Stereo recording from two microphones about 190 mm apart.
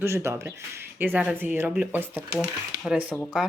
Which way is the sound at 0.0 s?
15° right (ahead or behind).